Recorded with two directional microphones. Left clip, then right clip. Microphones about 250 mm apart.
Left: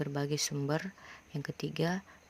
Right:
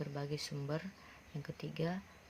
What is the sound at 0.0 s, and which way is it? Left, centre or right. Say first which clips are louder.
Speech: left 8 dB; left.